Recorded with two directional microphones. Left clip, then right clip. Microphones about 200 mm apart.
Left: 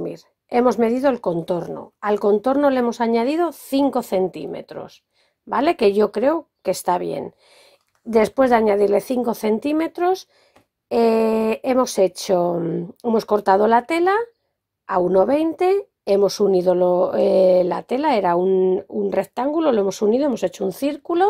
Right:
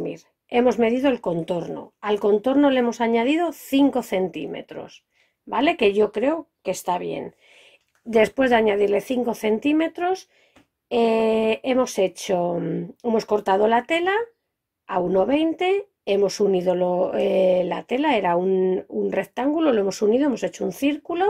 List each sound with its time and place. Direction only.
0.0 s a woman's voice: 30° left (ahead or behind)